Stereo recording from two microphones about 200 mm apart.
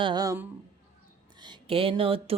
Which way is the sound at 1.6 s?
25° right (ahead or behind).